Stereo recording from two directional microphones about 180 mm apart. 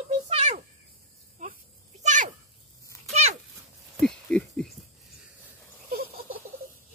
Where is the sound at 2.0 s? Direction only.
45° right (ahead or behind).